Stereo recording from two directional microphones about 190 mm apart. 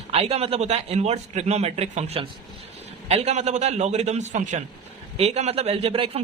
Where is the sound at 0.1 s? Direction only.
30° right (ahead or behind).